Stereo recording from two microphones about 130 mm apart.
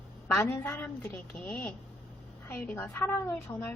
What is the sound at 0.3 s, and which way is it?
A woman's voice, 15° left (ahead or behind).